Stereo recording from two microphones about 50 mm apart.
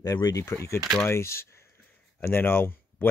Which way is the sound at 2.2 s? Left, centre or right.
Left.